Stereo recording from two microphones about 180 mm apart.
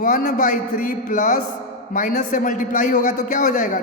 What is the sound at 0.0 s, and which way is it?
A man's voice, 45° left (ahead or behind).